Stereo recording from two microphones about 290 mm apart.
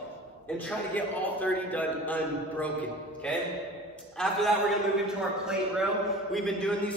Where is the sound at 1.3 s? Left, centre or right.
Centre.